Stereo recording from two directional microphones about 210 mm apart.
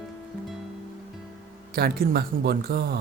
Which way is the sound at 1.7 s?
45° right (ahead or behind).